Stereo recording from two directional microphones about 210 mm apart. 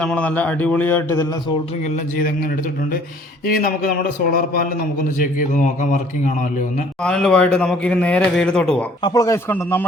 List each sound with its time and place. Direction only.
0.0 s a man's voice: 5° left (ahead or behind)
1.8 s a man's voice: 40° left (ahead or behind)
7.0 s a man's voice: 5° left (ahead or behind)
9.0 s a man's voice: 20° left (ahead or behind)